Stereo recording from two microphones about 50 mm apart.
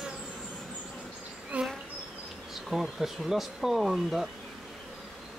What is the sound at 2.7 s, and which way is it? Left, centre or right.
Speech, centre.